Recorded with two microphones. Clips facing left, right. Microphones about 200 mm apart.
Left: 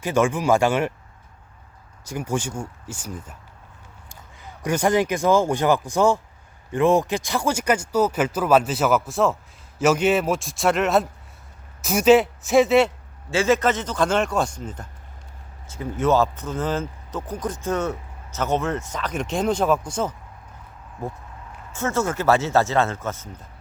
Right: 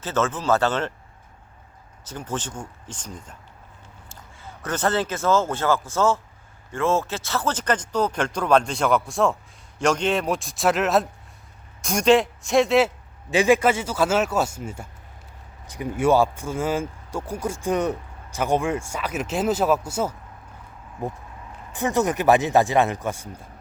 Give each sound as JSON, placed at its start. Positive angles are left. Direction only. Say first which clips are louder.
{"t": 0.0, "sound": "speech", "louder": "left 4 dB", "side_deg": 15}
{"t": 2.0, "sound": "speech", "louder": "left 4 dB", "side_deg": 10}
{"t": 13.3, "sound": "speech", "louder": "right 1 dB", "side_deg": -15}
{"t": 21.0, "sound": "speech", "louder": "right 1 dB", "side_deg": -20}